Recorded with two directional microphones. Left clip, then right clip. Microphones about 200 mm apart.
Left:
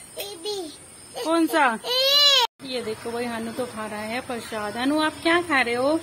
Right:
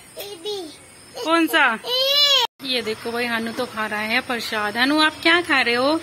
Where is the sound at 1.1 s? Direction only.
Centre (ahead or behind).